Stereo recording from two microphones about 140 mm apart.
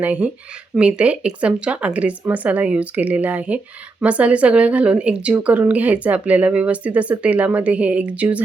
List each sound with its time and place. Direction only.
0.0 s speech: 10° right (ahead or behind)